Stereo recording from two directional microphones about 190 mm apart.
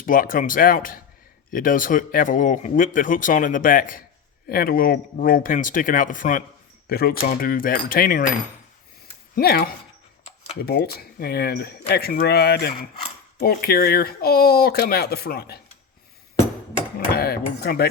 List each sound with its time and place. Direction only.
0.0 s speech: 45° left (ahead or behind)
9.3 s speech: 55° left (ahead or behind)
17.1 s speech: 55° left (ahead or behind)